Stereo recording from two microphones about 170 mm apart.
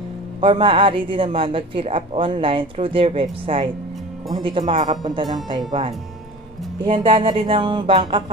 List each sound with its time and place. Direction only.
0.4 s speech: 30° right (ahead or behind)
6.8 s speech: 30° right (ahead or behind)